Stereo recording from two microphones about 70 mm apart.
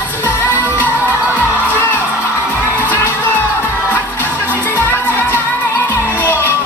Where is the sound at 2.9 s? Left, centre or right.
Left.